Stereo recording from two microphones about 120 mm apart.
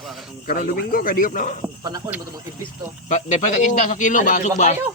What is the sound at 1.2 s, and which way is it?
Speech, 90° left.